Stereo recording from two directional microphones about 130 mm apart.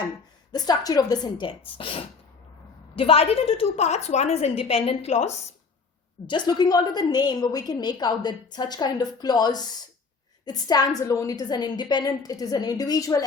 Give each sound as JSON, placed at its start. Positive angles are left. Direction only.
{"t": 0.5, "sound": "a woman's voice", "side_deg": 30}
{"t": 6.2, "sound": "a woman's voice", "side_deg": 35}